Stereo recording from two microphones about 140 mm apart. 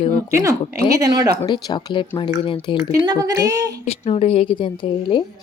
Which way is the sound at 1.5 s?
30° left (ahead or behind).